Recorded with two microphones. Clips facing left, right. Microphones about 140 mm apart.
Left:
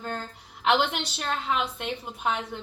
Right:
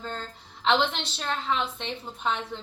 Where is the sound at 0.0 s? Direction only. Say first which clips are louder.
Left 2 dB; 10° left (ahead or behind).